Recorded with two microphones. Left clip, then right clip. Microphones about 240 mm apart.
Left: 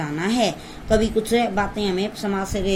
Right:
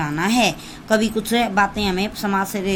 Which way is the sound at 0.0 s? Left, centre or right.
Right.